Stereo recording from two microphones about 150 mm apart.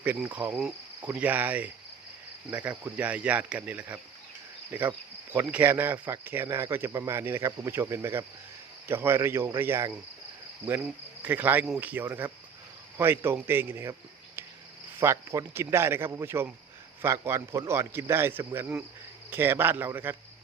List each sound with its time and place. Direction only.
0.0 s cricket: 10° right (ahead or behind)
11.2 s cricket: 15° right (ahead or behind)
14.9 s cricket: 15° right (ahead or behind)